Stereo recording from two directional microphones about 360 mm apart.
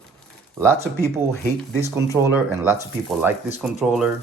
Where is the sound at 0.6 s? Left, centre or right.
Centre.